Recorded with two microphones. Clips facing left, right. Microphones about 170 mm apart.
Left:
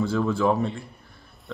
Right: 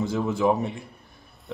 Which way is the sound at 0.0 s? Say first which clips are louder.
Left 1 dB; 20° right (ahead or behind).